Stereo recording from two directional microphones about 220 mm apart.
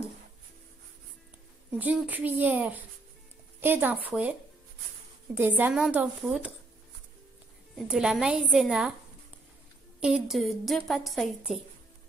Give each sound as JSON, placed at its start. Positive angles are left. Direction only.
{"t": 1.8, "sound": "a woman's voice", "side_deg": -5}
{"t": 7.9, "sound": "a woman's voice", "side_deg": -5}
{"t": 9.9, "sound": "a woman's voice", "side_deg": -5}